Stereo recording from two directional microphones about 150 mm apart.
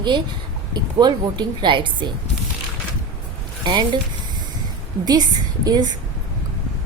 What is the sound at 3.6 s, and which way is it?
Speech, 30° right (ahead or behind).